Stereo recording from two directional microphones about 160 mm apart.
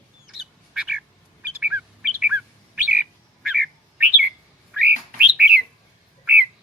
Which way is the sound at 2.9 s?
10° right (ahead or behind).